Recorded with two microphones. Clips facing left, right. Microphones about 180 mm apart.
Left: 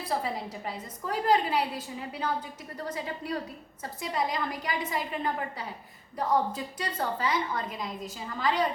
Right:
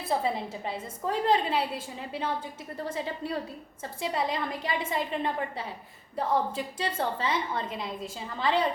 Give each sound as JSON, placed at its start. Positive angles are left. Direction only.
{"t": 0.0, "sound": "a woman's voice", "side_deg": -25}